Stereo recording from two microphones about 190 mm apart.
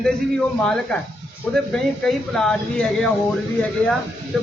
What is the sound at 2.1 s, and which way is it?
A man's voice, 5° left (ahead or behind).